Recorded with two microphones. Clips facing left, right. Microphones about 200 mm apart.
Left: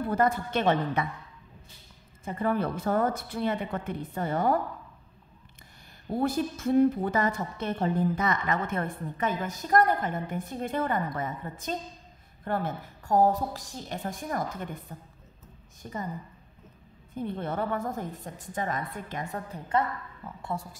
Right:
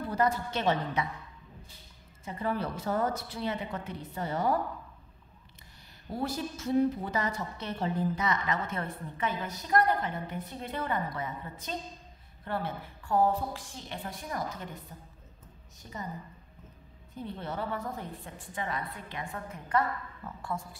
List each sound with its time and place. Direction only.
0.0 s a woman's voice: 55° left (ahead or behind)
2.2 s a woman's voice: 55° left (ahead or behind)
6.1 s a woman's voice: 55° left (ahead or behind)
15.8 s a woman's voice: 50° left (ahead or behind)
17.1 s a woman's voice: 50° left (ahead or behind); by 19.8 s 35° left (ahead or behind)
20.2 s a woman's voice: 10° left (ahead or behind)